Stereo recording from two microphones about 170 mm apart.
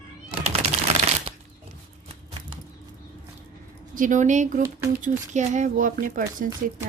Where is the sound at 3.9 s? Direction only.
50° right (ahead or behind).